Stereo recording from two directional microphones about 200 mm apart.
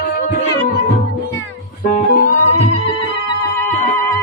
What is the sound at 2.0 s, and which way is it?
Music, 40° left (ahead or behind).